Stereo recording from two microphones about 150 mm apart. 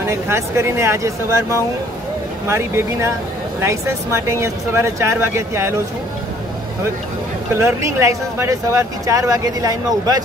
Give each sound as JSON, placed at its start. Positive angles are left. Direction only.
{"t": 0.0, "sound": "speech", "side_deg": -15}
{"t": 7.5, "sound": "speech", "side_deg": -20}